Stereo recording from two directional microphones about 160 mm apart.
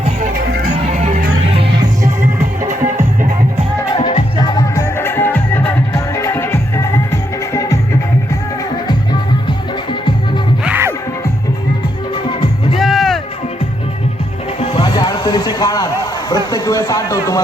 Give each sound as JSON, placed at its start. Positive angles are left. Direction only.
{"t": 0.3, "sound": "music", "side_deg": -75}
{"t": 0.8, "sound": "music", "side_deg": -45}
{"t": 3.9, "sound": "music", "side_deg": 30}
{"t": 10.6, "sound": "music", "side_deg": -10}
{"t": 12.3, "sound": "music", "side_deg": 35}
{"t": 12.8, "sound": "music", "side_deg": 0}
{"t": 14.6, "sound": "music", "side_deg": 40}
{"t": 14.9, "sound": "a sound", "side_deg": 25}